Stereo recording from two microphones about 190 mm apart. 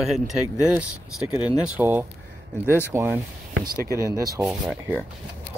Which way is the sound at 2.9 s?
15° right (ahead or behind).